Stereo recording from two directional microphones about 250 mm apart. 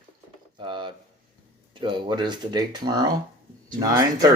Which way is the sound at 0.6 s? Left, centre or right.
Centre.